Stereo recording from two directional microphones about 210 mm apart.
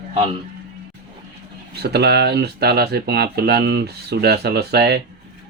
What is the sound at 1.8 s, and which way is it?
Speech, 50° right (ahead or behind).